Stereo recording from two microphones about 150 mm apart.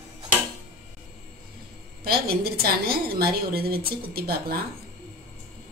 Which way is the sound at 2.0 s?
90° right.